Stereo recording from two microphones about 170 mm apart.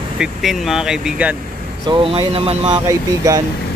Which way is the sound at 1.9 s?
35° right (ahead or behind).